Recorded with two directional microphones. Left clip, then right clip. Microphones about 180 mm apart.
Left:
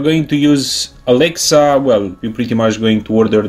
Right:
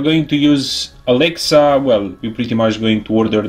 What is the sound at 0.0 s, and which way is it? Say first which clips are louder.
Speech: left 1 dB; 25° left (ahead or behind).